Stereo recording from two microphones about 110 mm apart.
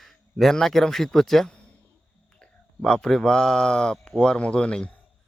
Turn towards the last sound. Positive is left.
turn(degrees=10)  # may be behind; listen again after turning